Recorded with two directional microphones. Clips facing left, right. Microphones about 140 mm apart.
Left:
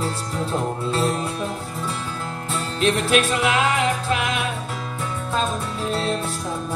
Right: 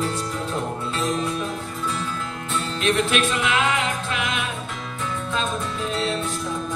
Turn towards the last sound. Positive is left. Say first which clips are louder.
# left 2 dB
turn(degrees=40)  # may be behind; listen again after turning